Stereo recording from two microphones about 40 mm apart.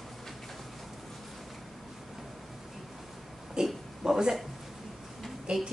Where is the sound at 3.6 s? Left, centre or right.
Centre.